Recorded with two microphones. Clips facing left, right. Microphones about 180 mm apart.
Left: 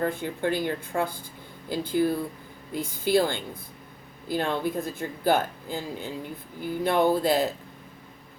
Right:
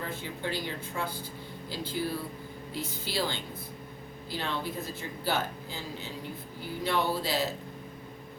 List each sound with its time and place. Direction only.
0.0 s speech: 55° left (ahead or behind)